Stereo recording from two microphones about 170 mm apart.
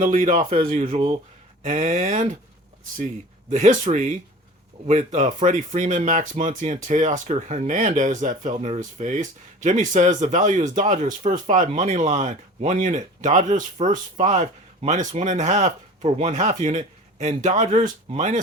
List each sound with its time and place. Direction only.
0.0 s speech: 50° right (ahead or behind)
3.5 s speech: 45° right (ahead or behind)